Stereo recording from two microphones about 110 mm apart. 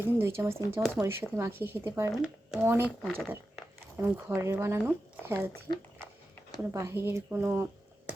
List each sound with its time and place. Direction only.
0.0 s speech: 20° right (ahead or behind)
2.1 s speech: 5° right (ahead or behind)
2.6 s speech: 20° right (ahead or behind)
2.8 s speech: 10° left (ahead or behind)
4.0 s speech: 25° right (ahead or behind)
6.6 s speech: 25° right (ahead or behind)